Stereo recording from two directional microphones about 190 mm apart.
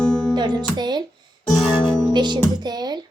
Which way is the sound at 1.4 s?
Centre (ahead or behind).